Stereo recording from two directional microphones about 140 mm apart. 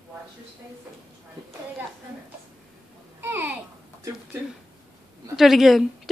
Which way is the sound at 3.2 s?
15° right (ahead or behind).